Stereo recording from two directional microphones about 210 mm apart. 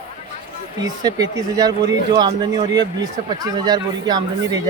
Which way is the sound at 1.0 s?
20° right (ahead or behind).